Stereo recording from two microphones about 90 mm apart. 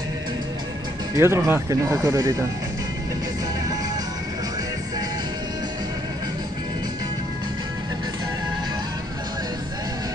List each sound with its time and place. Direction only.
1.1 s speech: 30° right (ahead or behind)